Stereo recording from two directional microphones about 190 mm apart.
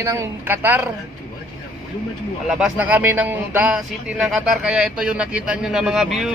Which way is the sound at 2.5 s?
5° right (ahead or behind).